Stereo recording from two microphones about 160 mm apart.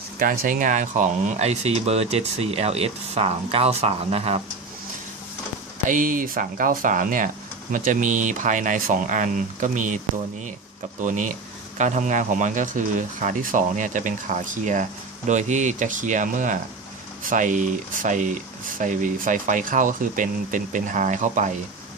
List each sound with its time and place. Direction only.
0.2 s speech: 60° right (ahead or behind); by 4.4 s 40° right (ahead or behind)
5.9 s speech: 55° right (ahead or behind)
11.0 s speech: 50° right (ahead or behind)